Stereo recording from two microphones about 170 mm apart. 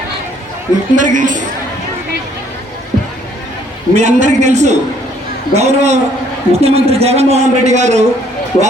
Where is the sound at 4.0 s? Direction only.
45° right (ahead or behind).